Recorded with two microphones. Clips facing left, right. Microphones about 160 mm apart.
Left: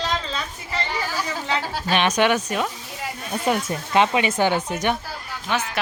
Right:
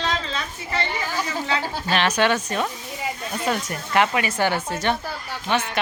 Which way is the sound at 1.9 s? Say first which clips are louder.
Left 1 dB; 20° left (ahead or behind).